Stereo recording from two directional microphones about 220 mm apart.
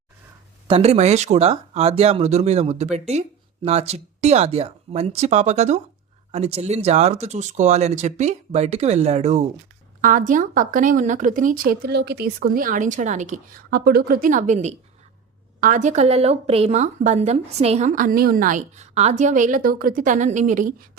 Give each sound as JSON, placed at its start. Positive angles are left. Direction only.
{"t": 0.7, "sound": "a woman's voice", "side_deg": -30}